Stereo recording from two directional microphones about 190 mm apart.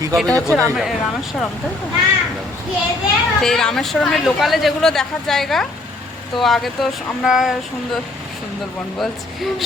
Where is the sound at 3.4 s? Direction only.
Centre (ahead or behind).